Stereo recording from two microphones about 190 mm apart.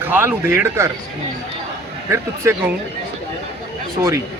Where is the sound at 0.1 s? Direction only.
10° right (ahead or behind).